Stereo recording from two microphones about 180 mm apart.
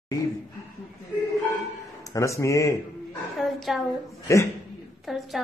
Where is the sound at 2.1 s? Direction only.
15° left (ahead or behind).